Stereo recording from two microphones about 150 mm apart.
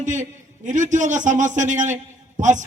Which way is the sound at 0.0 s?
55° right (ahead or behind).